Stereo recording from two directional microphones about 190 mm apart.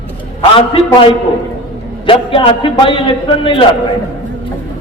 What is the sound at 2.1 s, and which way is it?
A man's voice, 30° left (ahead or behind).